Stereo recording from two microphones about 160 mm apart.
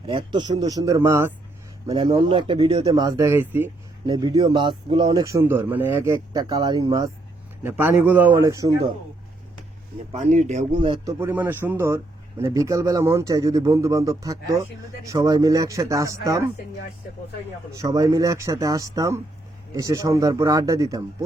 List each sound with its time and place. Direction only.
0.1 s speech: 30° right (ahead or behind)
1.9 s speech: 35° right (ahead or behind); by 6.1 s 15° right (ahead or behind)
6.3 s speech: 25° right (ahead or behind)
7.6 s a man's voice: 10° right (ahead or behind)
10.1 s speech: 45° right (ahead or behind)
10.8 s speech: 30° right (ahead or behind)
11.2 s a man's voice: 10° right (ahead or behind)
17.7 s speech: 20° right (ahead or behind)